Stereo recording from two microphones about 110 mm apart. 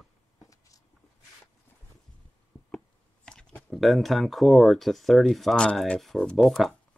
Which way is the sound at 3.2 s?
10° left (ahead or behind).